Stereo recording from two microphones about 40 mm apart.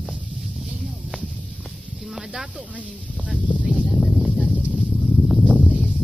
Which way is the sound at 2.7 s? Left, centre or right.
Right.